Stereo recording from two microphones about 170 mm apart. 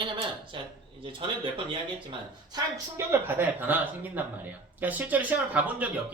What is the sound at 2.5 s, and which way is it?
Speech, 15° right (ahead or behind).